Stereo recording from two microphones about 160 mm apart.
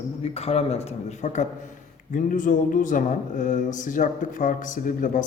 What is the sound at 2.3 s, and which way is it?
Speech, 55° left (ahead or behind).